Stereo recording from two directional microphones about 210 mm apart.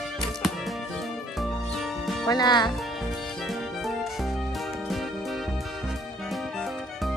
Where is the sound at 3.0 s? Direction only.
Centre (ahead or behind).